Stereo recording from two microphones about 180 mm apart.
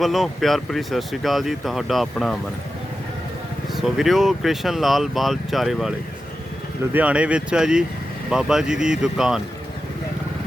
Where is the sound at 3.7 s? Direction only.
Centre (ahead or behind).